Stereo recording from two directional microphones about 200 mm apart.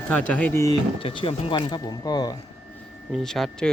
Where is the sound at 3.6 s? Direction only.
5° left (ahead or behind).